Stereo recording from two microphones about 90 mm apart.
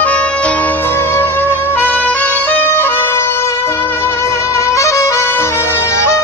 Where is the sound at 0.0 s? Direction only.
15° left (ahead or behind).